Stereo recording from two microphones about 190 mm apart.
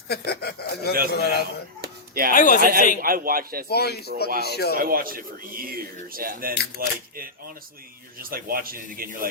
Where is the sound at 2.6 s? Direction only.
50° right (ahead or behind).